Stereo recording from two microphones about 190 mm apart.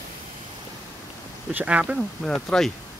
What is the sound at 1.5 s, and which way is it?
Speech, 5° right (ahead or behind).